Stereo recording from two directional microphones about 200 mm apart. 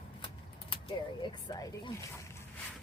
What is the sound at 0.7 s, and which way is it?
Speech, 25° left (ahead or behind).